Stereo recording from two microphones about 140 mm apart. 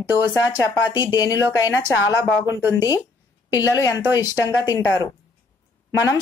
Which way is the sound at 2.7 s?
25° left (ahead or behind).